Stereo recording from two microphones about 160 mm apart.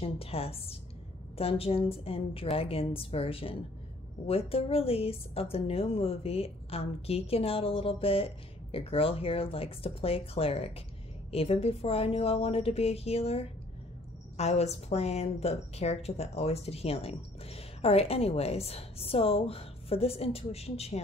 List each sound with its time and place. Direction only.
0.0 s a woman's voice: 35° left (ahead or behind)